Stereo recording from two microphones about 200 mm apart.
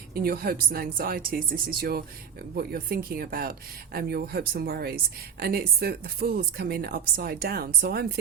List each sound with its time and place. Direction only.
0.1 s a woman's voice: 50° right (ahead or behind)